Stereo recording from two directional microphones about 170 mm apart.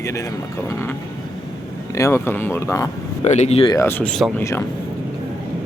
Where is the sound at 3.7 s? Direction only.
15° left (ahead or behind).